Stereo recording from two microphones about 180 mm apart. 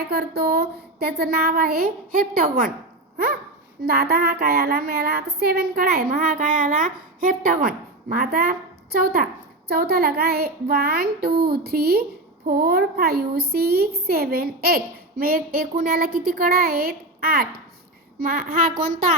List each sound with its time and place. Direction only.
0.0 s speech: 60° right (ahead or behind)
3.8 s a woman's voice: 60° right (ahead or behind)